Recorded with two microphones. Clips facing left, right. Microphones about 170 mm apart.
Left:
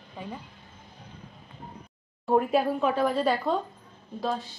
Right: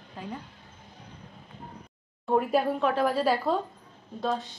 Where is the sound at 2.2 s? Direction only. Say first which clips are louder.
Left 1 dB; centre (ahead or behind).